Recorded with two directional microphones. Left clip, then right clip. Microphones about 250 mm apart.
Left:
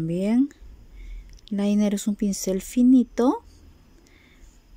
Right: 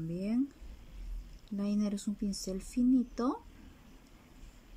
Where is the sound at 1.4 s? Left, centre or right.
Left.